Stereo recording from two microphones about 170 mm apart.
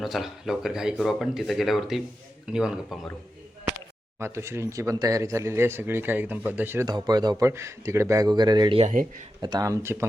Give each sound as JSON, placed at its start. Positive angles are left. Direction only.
{"t": 0.0, "sound": "speech", "side_deg": 0}
{"t": 4.2, "sound": "speech", "side_deg": -15}
{"t": 8.8, "sound": "speech", "side_deg": -50}
{"t": 9.4, "sound": "speech", "side_deg": -20}